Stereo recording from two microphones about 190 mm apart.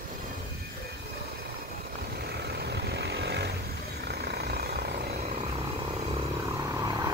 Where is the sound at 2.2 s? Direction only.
60° right (ahead or behind).